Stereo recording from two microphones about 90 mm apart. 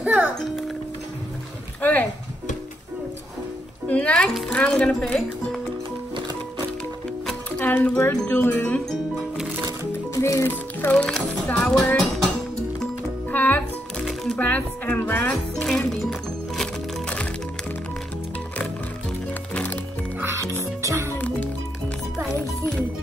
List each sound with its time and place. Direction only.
0.0 s music: 15° right (ahead or behind)
1.8 s a sound: 15° left (ahead or behind)
3.9 s speech: 15° left (ahead or behind)
7.5 s speech: 15° left (ahead or behind)
8.0 s speech: 25° left (ahead or behind)
10.1 s speech: 30° left (ahead or behind); by 12.0 s 10° left (ahead or behind)
13.3 s music: 20° left (ahead or behind)
14.0 s music: 5° left (ahead or behind)
14.4 s speech: 20° left (ahead or behind)
15.5 s music: 5° left (ahead or behind)
19.5 s music: 20° left (ahead or behind)
20.2 s music: 30° right (ahead or behind)